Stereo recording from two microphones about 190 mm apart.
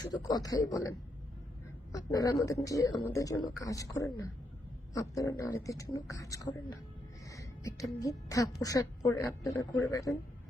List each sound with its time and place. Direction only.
0.0 s a man's voice: 20° left (ahead or behind)
7.3 s music: 15° left (ahead or behind)
7.9 s speech: 15° left (ahead or behind)